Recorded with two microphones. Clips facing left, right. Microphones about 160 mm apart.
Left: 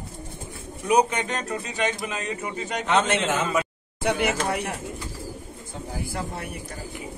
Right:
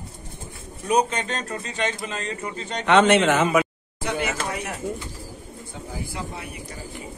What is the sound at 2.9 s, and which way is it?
Speech, 75° right (ahead or behind).